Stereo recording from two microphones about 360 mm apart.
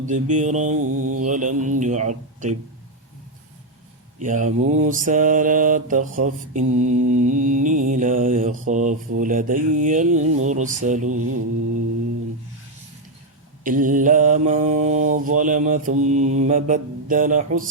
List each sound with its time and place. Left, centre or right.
0.3 s mantra: centre
0.9 s mantra: right
1.2 s mantra: right
4.2 s mantra: right
11.2 s mantra: right
13.7 s mantra: right